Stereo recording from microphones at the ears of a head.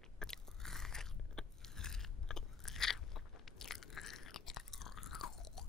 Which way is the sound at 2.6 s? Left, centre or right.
Left.